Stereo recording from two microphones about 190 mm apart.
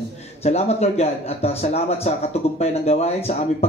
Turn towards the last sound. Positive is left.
turn(degrees=35)  # may be behind; listen again after turning